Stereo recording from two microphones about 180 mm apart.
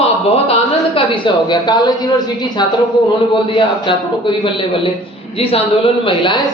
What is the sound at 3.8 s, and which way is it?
Speech, 25° left (ahead or behind).